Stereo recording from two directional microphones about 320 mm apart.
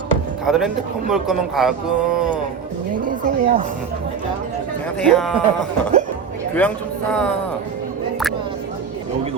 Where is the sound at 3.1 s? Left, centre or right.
Right.